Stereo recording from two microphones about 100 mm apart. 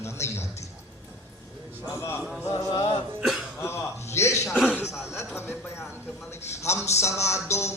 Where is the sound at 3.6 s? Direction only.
25° left (ahead or behind).